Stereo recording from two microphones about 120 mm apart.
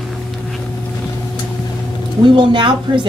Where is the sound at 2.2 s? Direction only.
45° right (ahead or behind).